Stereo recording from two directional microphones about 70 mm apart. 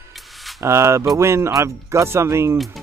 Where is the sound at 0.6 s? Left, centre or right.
Right.